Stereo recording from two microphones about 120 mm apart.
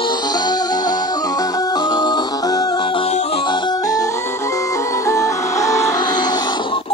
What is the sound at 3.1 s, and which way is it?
Music, 60° left (ahead or behind).